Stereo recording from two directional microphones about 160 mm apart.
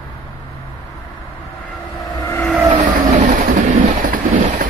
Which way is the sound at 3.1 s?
55° right (ahead or behind).